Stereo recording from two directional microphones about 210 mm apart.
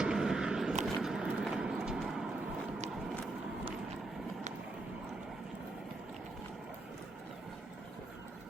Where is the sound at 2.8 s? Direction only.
Centre (ahead or behind).